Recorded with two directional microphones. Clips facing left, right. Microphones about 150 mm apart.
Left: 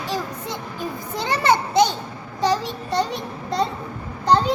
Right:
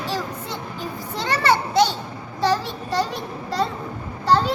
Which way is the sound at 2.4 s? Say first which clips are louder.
Even; 20° left (ahead or behind).